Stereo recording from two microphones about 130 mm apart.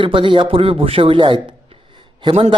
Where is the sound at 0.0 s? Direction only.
40° right (ahead or behind).